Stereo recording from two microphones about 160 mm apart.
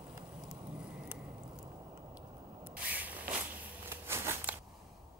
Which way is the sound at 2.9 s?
10° right (ahead or behind).